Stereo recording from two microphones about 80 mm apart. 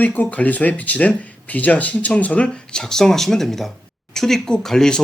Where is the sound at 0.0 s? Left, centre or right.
Centre.